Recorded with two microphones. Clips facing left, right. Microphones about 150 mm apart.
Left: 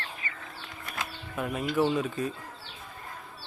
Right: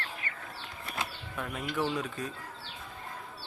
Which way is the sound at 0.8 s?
30° right (ahead or behind).